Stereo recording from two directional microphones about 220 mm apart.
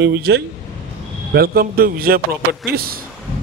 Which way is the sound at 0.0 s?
45° right (ahead or behind).